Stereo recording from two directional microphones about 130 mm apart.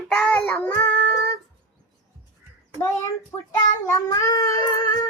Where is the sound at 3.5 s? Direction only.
25° left (ahead or behind).